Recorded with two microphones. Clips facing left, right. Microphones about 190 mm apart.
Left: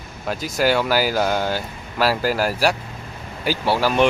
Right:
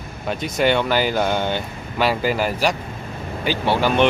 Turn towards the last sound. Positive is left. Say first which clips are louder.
# right 1 dB
turn(degrees=5)  # may be behind; listen again after turning